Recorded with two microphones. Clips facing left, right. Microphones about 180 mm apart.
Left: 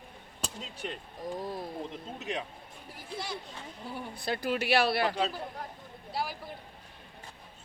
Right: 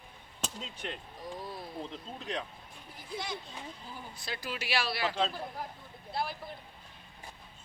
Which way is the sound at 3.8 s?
65° left (ahead or behind).